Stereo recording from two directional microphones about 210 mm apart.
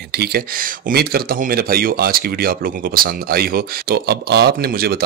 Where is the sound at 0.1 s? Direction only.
50° right (ahead or behind).